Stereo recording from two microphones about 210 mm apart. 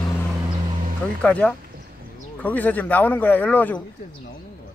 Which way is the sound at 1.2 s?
5° left (ahead or behind).